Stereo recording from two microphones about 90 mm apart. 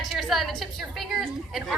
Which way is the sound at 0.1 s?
Centre (ahead or behind).